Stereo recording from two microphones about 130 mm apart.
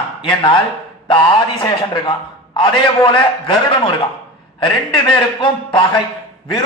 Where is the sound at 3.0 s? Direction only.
40° left (ahead or behind).